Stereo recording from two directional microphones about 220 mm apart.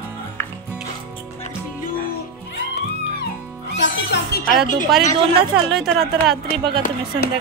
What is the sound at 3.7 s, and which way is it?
Speech, 55° left (ahead or behind).